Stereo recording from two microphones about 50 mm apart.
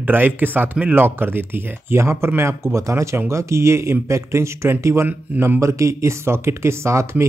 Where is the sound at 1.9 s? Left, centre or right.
Right.